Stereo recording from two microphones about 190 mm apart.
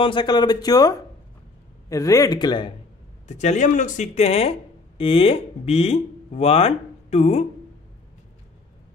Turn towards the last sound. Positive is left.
turn(degrees=35)  # may be behind; listen again after turning